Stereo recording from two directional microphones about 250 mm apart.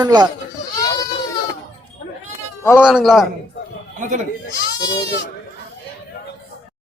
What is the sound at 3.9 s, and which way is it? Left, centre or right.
Speech, right.